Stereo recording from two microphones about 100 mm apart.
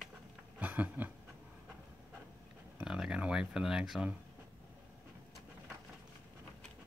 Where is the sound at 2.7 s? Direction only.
5° right (ahead or behind).